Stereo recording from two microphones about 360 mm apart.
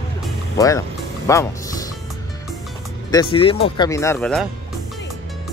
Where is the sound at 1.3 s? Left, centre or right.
Centre.